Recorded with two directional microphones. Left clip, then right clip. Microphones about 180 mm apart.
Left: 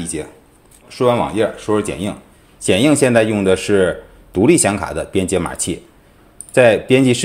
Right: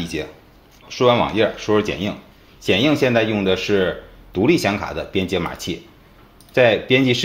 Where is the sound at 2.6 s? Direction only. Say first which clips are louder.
Left 3 dB; 40° left (ahead or behind).